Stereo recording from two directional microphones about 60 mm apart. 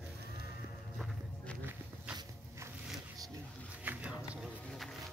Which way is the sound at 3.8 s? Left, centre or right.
Right.